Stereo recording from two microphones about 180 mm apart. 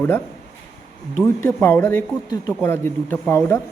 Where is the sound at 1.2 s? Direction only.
15° left (ahead or behind).